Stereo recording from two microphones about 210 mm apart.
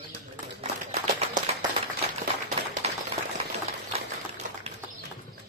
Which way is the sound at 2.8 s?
30° right (ahead or behind).